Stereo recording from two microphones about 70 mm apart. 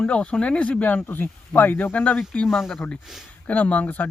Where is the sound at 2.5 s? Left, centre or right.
Centre.